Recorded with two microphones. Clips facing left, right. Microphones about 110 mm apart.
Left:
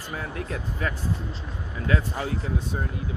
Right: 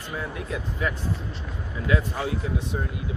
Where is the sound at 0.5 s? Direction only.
40° left (ahead or behind).